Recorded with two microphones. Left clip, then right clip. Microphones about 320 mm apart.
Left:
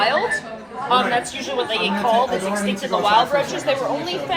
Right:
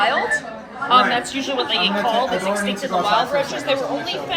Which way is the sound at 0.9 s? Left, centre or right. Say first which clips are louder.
Right 3 dB; left.